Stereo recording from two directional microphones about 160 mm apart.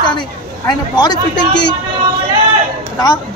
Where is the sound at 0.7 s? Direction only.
25° left (ahead or behind).